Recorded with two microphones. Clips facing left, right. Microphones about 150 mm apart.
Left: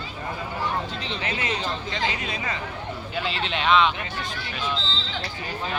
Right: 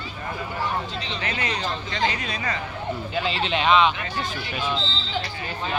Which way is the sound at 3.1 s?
Centre (ahead or behind).